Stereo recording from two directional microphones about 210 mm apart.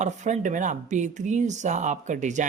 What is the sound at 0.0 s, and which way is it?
Speech, 35° right (ahead or behind).